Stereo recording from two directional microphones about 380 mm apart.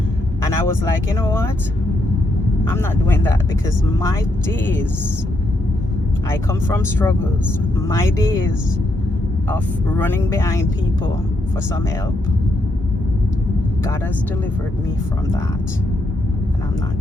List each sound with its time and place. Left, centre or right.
0.9 s speech: centre
2.6 s speech: centre
4.6 s speech: centre
6.3 s speech: centre
9.5 s speech: centre